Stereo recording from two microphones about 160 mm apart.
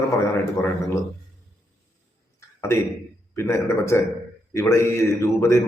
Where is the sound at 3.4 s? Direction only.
15° left (ahead or behind).